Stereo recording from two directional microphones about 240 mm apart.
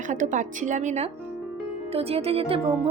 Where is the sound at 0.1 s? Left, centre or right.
Right.